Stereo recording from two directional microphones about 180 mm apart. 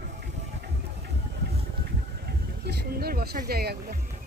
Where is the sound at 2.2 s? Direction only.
65° right (ahead or behind).